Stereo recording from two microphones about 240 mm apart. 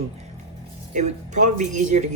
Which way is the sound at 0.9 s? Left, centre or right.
Right.